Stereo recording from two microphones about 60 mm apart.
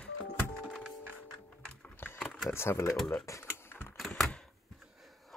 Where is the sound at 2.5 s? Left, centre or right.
Left.